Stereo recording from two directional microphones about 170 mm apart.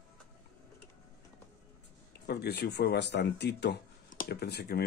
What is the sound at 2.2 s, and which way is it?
Speech, 70° left (ahead or behind).